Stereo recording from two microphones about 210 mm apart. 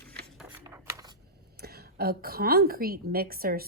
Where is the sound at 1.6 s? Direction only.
50° right (ahead or behind).